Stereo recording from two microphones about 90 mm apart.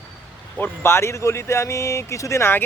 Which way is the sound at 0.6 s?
30° left (ahead or behind).